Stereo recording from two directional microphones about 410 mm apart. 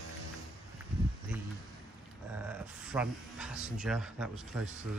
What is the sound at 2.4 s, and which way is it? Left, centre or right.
A man's voice, centre.